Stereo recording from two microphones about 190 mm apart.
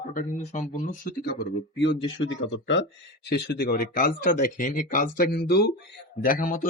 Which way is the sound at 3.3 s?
55° left (ahead or behind).